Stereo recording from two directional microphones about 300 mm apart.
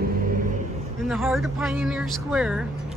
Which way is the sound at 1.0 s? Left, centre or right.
Centre.